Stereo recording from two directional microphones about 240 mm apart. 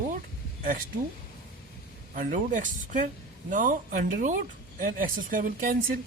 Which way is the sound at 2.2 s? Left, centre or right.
Right.